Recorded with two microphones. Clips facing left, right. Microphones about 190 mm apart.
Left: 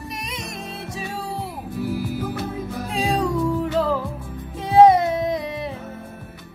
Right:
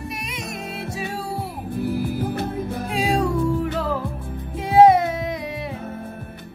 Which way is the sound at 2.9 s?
10° right (ahead or behind).